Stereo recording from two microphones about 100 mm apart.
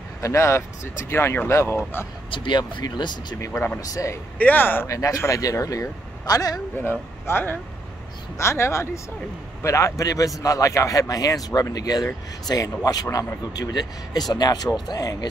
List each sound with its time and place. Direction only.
0.2 s speech: 30° left (ahead or behind)
2.3 s speech: 55° left (ahead or behind)
3.3 s speech: 30° left (ahead or behind)
4.4 s speech: 20° left (ahead or behind)
4.8 s speech: 35° left (ahead or behind)
6.8 s speech: 20° left (ahead or behind); by 15.2 s 40° left (ahead or behind)